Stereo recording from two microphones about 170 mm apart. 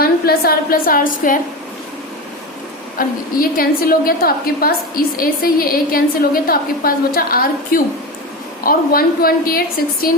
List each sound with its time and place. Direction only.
0.0 s a woman's voice: 65° left (ahead or behind)
3.0 s a woman's voice: 60° left (ahead or behind)